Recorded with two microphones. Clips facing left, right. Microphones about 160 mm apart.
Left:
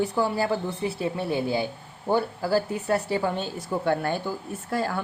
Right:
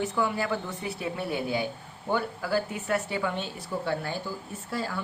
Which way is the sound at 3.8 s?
55° left (ahead or behind).